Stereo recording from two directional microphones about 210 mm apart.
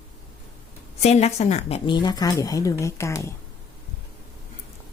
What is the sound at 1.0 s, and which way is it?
Speech, 30° left (ahead or behind).